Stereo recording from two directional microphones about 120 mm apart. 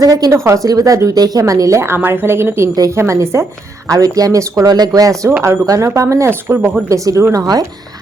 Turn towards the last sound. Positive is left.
turn(degrees=-30)  # may be behind; listen again after turning